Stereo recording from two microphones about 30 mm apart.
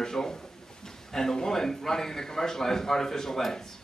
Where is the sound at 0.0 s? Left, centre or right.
Centre.